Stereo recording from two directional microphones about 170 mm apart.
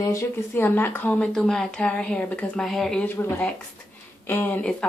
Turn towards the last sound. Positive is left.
turn(degrees=5)  # may be behind; listen again after turning